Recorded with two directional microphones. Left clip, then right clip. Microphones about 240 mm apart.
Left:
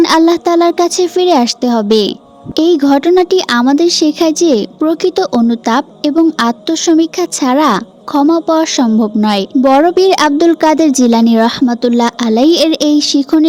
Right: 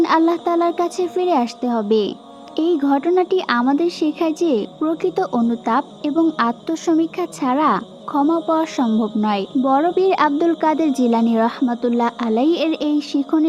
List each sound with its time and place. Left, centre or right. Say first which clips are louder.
0.0 s speech: left 7 dB; left